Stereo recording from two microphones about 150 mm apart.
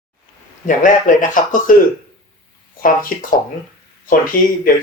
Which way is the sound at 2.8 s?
65° left (ahead or behind).